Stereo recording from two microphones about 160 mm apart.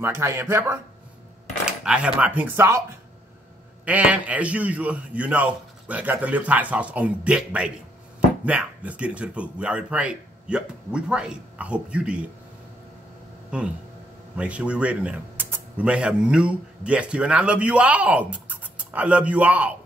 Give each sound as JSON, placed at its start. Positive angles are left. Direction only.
{"t": 0.0, "sound": "a man's voice", "side_deg": -15}
{"t": 1.7, "sound": "a man's voice", "side_deg": -5}
{"t": 3.8, "sound": "a man's voice", "side_deg": -10}
{"t": 13.5, "sound": "a man's voice", "side_deg": -5}